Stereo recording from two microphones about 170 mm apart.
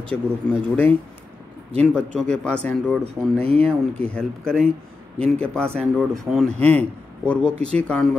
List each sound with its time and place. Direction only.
0.1 s a man's voice: 10° left (ahead or behind)
3.3 s speech: 35° right (ahead or behind)
3.6 s a man's voice: 5° left (ahead or behind)